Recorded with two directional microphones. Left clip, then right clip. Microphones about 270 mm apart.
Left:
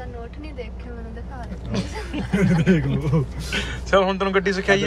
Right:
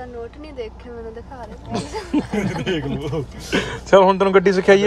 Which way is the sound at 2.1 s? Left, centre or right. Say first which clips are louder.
Right 1 dB; right.